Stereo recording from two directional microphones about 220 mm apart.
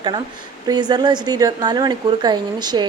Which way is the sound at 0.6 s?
20° right (ahead or behind).